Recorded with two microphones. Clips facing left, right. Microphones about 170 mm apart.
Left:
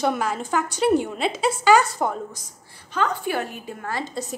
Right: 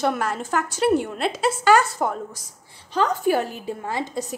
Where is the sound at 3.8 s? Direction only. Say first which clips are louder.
Right 1 dB; 20° right (ahead or behind).